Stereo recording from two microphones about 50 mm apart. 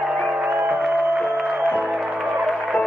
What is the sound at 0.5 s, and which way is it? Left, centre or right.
Music, right.